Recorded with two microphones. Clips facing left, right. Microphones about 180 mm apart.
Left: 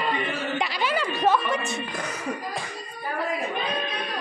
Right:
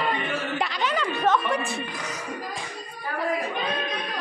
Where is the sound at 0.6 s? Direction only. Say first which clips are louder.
Left 1 dB; 10° left (ahead or behind).